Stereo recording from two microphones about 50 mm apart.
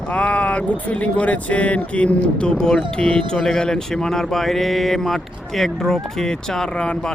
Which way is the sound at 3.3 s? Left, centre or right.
Centre.